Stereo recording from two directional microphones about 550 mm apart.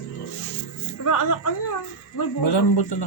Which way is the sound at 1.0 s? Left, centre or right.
Left.